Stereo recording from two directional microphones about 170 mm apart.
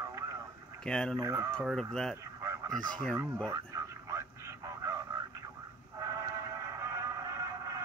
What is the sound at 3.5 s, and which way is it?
Radio, 20° right (ahead or behind).